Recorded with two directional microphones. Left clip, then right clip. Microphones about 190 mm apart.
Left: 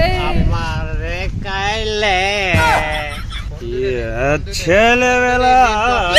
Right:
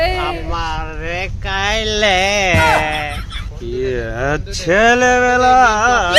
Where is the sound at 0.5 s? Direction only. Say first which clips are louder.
Right 2 dB; 40° right (ahead or behind); by 2.6 s 65° right (ahead or behind).